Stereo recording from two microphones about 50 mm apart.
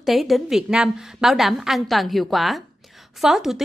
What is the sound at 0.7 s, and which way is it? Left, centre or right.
A woman's voice, centre.